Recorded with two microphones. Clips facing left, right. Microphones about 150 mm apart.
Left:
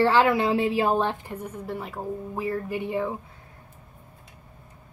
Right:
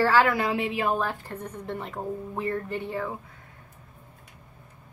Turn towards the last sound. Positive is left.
turn(degrees=15)  # may be behind; listen again after turning